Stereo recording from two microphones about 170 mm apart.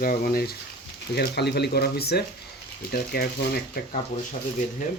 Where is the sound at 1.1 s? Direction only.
75° left (ahead or behind).